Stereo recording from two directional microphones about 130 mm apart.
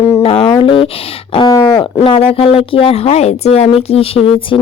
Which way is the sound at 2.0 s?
45° left (ahead or behind).